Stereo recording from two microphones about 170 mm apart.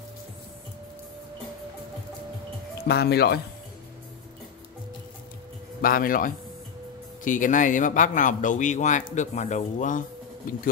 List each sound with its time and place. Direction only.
2.9 s speech: 75° left (ahead or behind)
5.8 s a man's voice: 55° left (ahead or behind)